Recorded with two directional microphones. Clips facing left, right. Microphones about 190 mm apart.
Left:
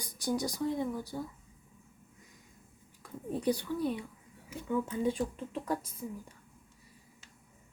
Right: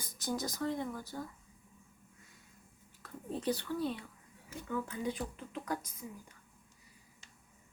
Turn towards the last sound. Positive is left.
turn(degrees=30)  # may be behind; listen again after turning